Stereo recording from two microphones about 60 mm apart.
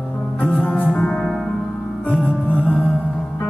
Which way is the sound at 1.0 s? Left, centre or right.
Centre.